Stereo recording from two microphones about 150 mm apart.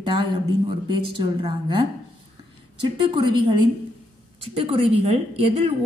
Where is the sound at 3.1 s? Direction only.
30° right (ahead or behind).